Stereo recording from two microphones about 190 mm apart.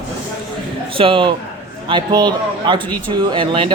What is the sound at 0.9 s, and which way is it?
A man's voice, 25° right (ahead or behind).